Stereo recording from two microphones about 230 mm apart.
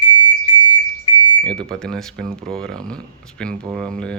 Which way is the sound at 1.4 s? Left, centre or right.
Centre.